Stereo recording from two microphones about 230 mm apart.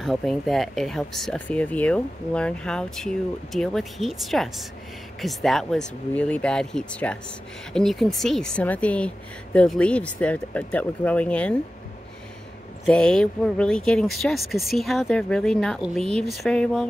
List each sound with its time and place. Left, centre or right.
0.0 s speech: centre
12.8 s speech: centre